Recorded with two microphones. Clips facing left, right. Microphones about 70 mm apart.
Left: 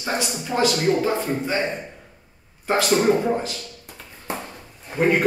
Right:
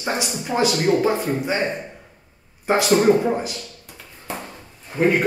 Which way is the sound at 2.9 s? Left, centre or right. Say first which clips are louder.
Right 3 dB; centre.